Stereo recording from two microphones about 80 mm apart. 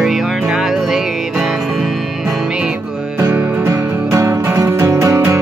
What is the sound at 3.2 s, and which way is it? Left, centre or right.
Music, right.